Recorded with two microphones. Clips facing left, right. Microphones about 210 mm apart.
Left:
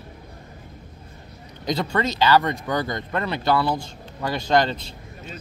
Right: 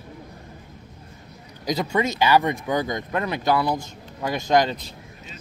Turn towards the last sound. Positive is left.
turn(degrees=-10)  # may be behind; listen again after turning